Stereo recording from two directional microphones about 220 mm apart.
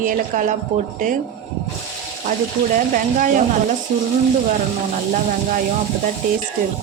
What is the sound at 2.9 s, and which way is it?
Speech, 35° right (ahead or behind).